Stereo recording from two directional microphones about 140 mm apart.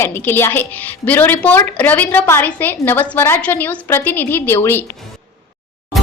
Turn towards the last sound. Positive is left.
turn(degrees=15)  # may be behind; listen again after turning